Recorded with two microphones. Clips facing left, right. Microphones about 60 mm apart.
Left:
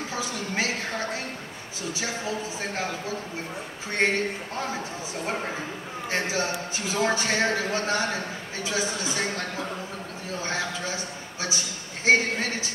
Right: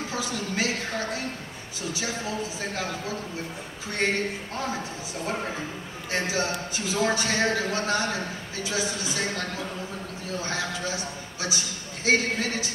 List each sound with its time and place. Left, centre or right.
0.1 s a sound: left
2.0 s a man's voice: left
4.0 s speech: left
5.2 s a man's voice: left